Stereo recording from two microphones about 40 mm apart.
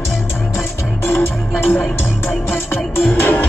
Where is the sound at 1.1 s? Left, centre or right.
Left.